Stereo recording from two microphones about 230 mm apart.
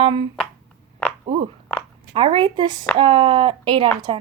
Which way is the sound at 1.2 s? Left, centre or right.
Right.